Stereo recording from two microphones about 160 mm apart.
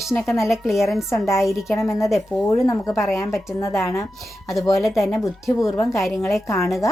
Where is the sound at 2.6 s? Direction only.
20° left (ahead or behind).